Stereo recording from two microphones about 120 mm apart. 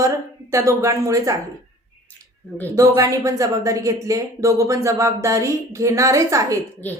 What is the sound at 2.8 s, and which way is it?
Speech, 25° right (ahead or behind).